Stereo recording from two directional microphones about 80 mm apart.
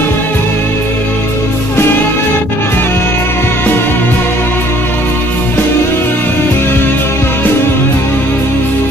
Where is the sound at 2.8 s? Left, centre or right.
Left.